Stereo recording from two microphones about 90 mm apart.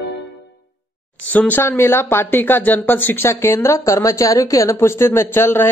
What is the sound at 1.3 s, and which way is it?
Speech, 20° left (ahead or behind).